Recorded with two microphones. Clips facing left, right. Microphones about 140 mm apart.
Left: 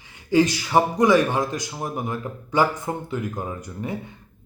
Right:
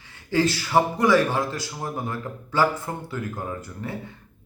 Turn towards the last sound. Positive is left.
turn(degrees=20)  # may be behind; listen again after turning